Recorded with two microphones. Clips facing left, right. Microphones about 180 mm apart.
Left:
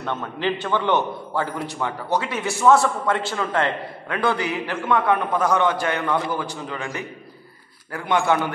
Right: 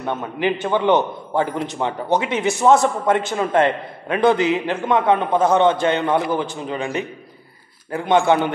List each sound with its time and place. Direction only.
0.0 s a man's voice: 15° right (ahead or behind)